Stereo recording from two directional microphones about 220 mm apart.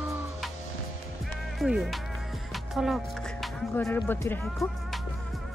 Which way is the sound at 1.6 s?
Centre (ahead or behind).